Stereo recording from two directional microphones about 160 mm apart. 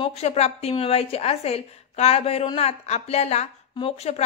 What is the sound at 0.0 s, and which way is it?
Speech, 40° left (ahead or behind).